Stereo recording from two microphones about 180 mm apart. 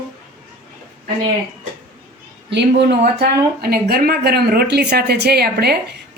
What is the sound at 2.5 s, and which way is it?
Speech, 75° right (ahead or behind).